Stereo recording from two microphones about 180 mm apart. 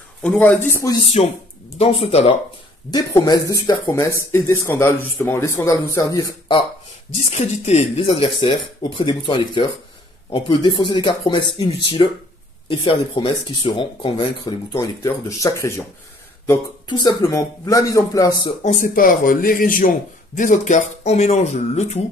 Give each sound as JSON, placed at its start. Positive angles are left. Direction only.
{"t": 0.2, "sound": "speech", "side_deg": 5}
{"t": 1.0, "sound": "speech", "side_deg": 35}
{"t": 2.9, "sound": "speech", "side_deg": 20}
{"t": 7.2, "sound": "speech", "side_deg": 35}
{"t": 14.7, "sound": "speech", "side_deg": 15}
{"t": 17.0, "sound": "speech", "side_deg": 20}
{"t": 18.6, "sound": "speech", "side_deg": 45}